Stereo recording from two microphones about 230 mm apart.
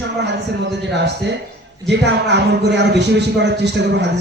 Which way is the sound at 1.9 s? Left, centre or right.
Right.